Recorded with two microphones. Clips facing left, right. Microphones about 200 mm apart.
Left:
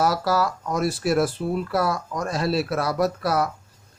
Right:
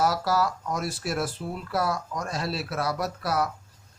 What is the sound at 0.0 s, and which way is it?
A man's voice, 75° left (ahead or behind).